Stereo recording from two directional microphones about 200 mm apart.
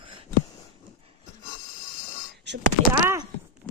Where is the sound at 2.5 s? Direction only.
60° right (ahead or behind).